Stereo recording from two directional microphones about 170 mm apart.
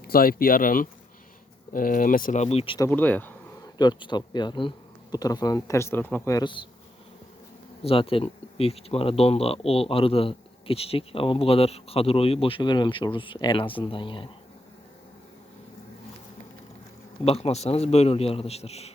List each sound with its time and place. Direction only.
0.0 s speech: 60° left (ahead or behind); by 2.7 s 35° left (ahead or behind)
2.7 s speech: 15° left (ahead or behind)
3.8 s speech: 25° left (ahead or behind)
7.8 s speech: 35° left (ahead or behind)
17.2 s speech: 35° left (ahead or behind)